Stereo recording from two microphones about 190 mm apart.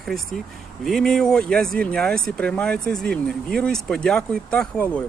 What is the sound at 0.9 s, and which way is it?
Speech, centre (ahead or behind).